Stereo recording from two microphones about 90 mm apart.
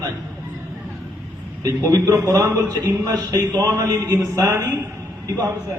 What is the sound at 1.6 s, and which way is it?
A man's voice, 40° right (ahead or behind).